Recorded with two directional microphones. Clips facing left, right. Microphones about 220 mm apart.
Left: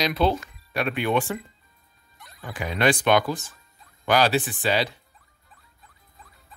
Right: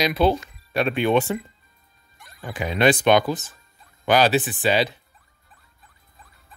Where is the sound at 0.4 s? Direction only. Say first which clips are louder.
Right 4 dB; 25° right (ahead or behind).